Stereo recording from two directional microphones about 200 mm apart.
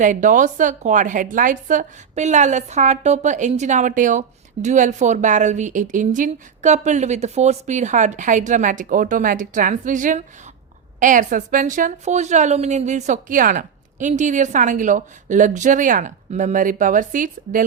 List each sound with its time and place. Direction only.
0.0 s a woman's voice: 40° right (ahead or behind)